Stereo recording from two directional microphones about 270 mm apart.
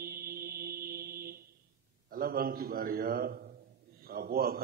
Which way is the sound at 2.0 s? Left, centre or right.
Right.